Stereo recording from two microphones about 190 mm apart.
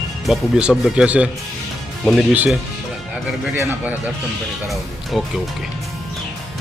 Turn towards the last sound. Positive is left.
turn(degrees=0)  # may be behind; listen again after turning